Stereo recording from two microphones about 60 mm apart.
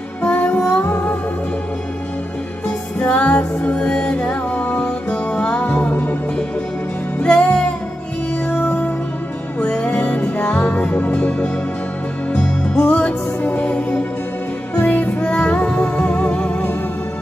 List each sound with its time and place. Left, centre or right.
0.2 s music: left
3.0 s music: left
7.2 s music: centre
8.6 s music: left
12.7 s music: left